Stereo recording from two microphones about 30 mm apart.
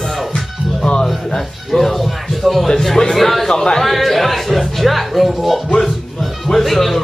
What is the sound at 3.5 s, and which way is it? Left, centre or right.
Speech, left.